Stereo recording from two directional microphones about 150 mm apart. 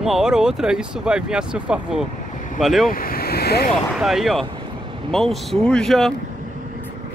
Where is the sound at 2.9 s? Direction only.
80° left.